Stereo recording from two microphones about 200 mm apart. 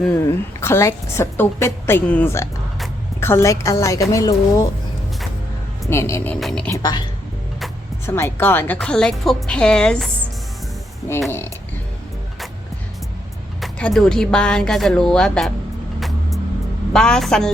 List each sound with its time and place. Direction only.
0.1 s a woman's voice: 10° left (ahead or behind)
5.9 s a woman's voice: 15° left (ahead or behind)
6.7 s speech: 20° left (ahead or behind)
8.0 s speech: 10° left (ahead or behind)
13.6 s speech: 5° left (ahead or behind)
16.0 s vehicle: centre (ahead or behind)
16.9 s speech: 5° left (ahead or behind)